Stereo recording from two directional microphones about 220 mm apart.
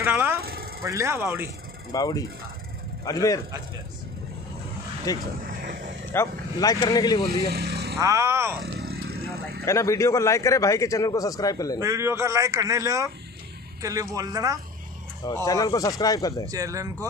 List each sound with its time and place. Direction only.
0.0 s speech: 10° right (ahead or behind)
0.4 s vehicle: 45° right (ahead or behind)
0.8 s a man's voice: 15° right (ahead or behind)
1.9 s a man's voice: 15° left (ahead or behind)
5.1 s a man's voice: 15° left (ahead or behind)
5.5 s a sound: 40° right (ahead or behind)
6.1 s a man's voice: 15° left (ahead or behind)
7.5 s vehicle: 45° right (ahead or behind)
8.0 s a man's voice: 15° right (ahead or behind)
8.5 s a sound: 45° right (ahead or behind)
9.7 s a man's voice: 15° left (ahead or behind)
11.8 s a man's voice: 10° right (ahead or behind)
15.2 s a man's voice: 15° left (ahead or behind)
16.4 s a man's voice: 15° right (ahead or behind)